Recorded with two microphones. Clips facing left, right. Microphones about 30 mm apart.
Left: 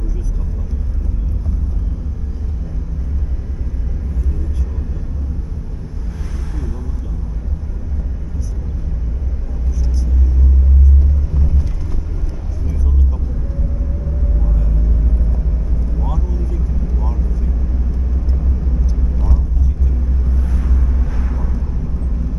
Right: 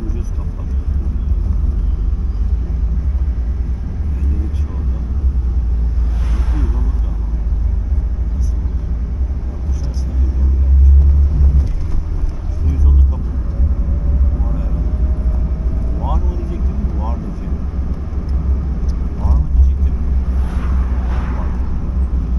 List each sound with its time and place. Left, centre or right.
6.3 s vehicle: right
11.4 s vehicle: centre
14.4 s vehicle: centre
16.0 s vehicle: centre
19.1 s vehicle: centre
20.4 s vehicle: right
20.7 s vehicle: centre
21.1 s a sound: right